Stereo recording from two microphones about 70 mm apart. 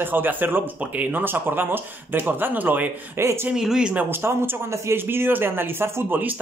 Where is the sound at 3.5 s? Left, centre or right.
Centre.